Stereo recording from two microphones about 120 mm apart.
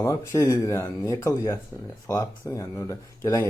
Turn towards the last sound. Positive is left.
turn(degrees=25)  # may be behind; listen again after turning